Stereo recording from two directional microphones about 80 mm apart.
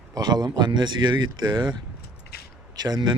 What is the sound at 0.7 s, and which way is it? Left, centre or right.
Speech, right.